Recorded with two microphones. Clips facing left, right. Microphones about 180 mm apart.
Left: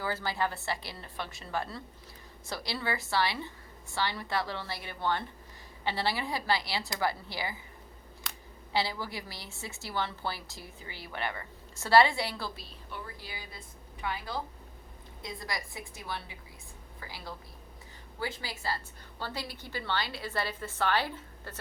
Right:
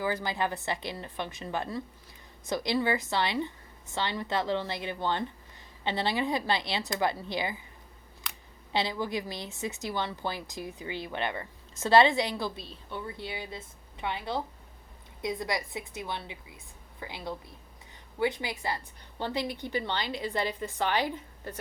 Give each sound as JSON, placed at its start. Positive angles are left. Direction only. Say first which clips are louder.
{"t": 0.0, "sound": "a woman's voice", "louder": "right 2 dB", "side_deg": -15}
{"t": 8.7, "sound": "a woman's voice", "louder": "right 3 dB", "side_deg": -20}